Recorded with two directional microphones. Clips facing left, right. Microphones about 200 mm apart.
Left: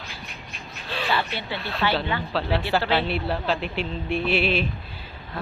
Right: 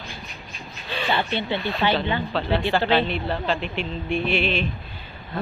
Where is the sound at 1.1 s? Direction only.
20° right (ahead or behind).